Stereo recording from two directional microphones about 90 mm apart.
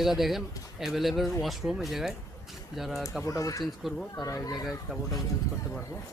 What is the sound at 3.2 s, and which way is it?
Speech, 40° left (ahead or behind).